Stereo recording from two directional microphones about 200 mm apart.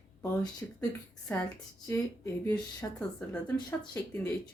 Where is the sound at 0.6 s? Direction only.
10° left (ahead or behind).